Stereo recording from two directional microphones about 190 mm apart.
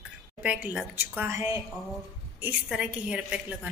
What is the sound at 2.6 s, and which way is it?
Speech, 5° right (ahead or behind).